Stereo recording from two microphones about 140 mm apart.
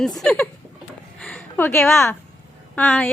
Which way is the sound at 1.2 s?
5° left (ahead or behind).